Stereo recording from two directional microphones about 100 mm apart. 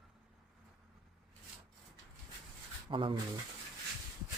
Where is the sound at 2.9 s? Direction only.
60° right (ahead or behind).